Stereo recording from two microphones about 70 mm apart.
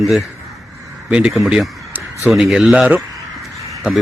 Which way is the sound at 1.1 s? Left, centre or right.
Centre.